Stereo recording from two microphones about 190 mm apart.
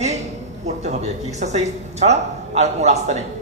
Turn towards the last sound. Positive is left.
turn(degrees=-35)  # may be behind; listen again after turning